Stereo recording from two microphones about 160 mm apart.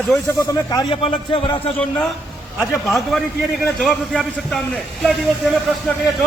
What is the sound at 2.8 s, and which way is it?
A man's voice, centre (ahead or behind).